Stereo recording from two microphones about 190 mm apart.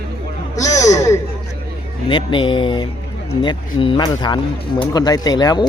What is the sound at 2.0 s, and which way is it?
Speech, 25° left (ahead or behind).